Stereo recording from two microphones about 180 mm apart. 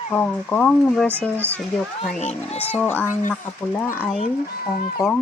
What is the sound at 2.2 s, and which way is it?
Speech, 35° left (ahead or behind).